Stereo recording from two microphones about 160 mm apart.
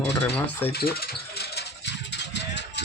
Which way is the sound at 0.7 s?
80° left.